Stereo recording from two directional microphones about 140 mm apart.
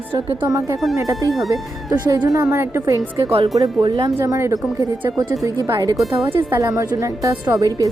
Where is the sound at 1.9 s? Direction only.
25° right (ahead or behind).